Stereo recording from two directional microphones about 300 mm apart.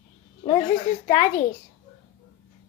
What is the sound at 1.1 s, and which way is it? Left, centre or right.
Speech, left.